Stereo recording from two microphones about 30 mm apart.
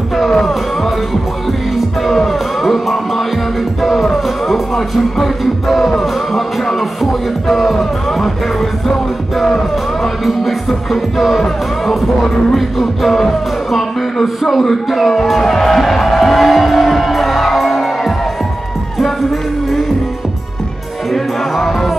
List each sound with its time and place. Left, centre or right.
0.1 s music: centre
2.0 s music: centre
6.6 s music: centre
7.0 s music: centre
10.0 s music: centre
12.5 s speech: centre
16.4 s music: centre
21.1 s music: centre